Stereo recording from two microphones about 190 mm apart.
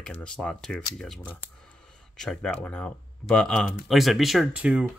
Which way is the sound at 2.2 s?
5° left (ahead or behind).